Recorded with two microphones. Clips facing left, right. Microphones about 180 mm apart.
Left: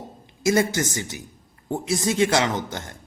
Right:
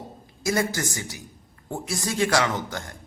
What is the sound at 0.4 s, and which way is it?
Speech, 25° left (ahead or behind).